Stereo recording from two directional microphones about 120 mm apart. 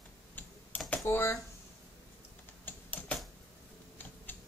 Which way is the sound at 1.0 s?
20° left (ahead or behind).